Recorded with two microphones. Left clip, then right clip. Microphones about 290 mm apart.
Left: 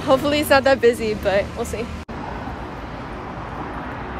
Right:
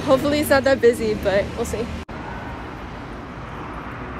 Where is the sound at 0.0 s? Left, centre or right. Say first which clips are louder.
Even; centre.